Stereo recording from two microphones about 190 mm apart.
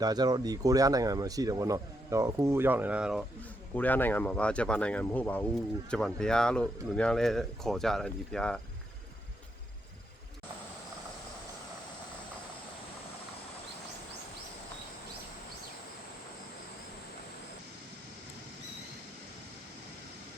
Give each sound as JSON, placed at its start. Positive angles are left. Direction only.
{"t": 0.0, "sound": "speech", "side_deg": -20}
{"t": 3.8, "sound": "speech", "side_deg": 10}